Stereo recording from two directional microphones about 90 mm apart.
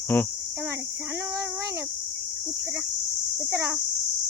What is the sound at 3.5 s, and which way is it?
Speech, 35° right (ahead or behind).